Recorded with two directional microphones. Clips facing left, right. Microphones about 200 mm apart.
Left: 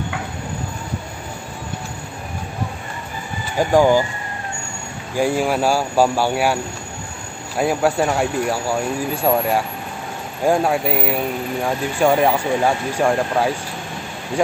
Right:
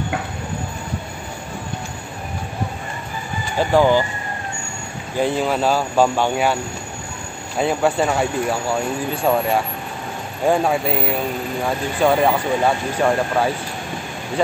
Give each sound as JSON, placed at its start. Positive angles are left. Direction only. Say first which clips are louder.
{"t": 3.5, "sound": "speech", "louder": "left 1 dB", "side_deg": 10}
{"t": 5.1, "sound": "speech", "louder": "left 1 dB", "side_deg": 10}